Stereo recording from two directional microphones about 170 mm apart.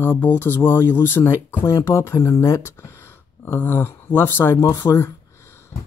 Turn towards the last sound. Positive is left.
turn(degrees=15)  # may be behind; listen again after turning